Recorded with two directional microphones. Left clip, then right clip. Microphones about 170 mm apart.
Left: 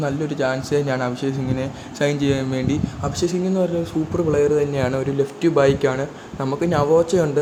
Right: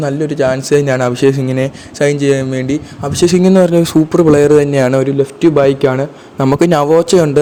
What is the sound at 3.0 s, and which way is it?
Speech, 50° right (ahead or behind).